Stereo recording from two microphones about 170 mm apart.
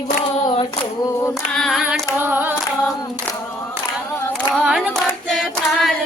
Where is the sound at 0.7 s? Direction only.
20° left (ahead or behind).